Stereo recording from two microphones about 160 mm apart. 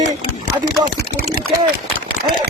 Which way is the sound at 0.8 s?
70° right (ahead or behind).